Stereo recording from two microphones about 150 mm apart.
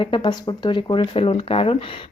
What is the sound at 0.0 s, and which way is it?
Speech, 30° left (ahead or behind).